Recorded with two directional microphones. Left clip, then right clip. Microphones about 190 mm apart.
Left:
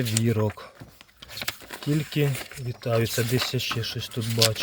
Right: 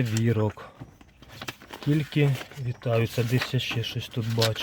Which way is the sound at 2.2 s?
5° left (ahead or behind).